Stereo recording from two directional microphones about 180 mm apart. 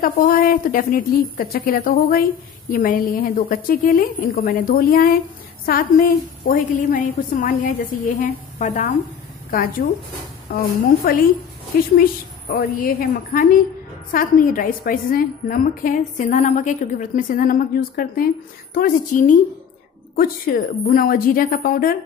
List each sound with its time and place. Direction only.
0.0 s a woman's voice: 50° left (ahead or behind)
9.5 s a woman's voice: 55° left (ahead or behind)